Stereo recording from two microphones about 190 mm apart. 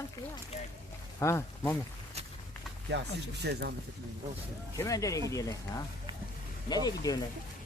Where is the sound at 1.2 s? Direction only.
15° left (ahead or behind).